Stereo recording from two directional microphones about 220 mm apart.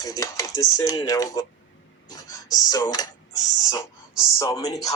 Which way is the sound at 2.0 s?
15° left (ahead or behind).